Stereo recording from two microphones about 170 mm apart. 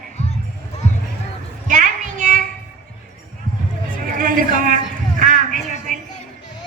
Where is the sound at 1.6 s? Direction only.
50° right (ahead or behind).